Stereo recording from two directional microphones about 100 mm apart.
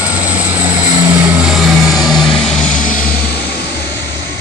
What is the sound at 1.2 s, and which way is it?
Vehicle, 15° right (ahead or behind).